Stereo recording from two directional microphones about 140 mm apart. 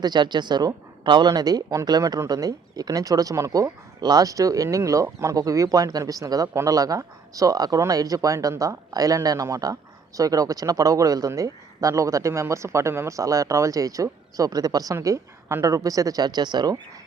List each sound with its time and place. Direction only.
0.0 s speech: 30° right (ahead or behind)